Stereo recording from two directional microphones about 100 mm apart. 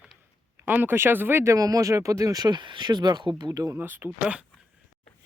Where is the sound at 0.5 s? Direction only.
20° right (ahead or behind).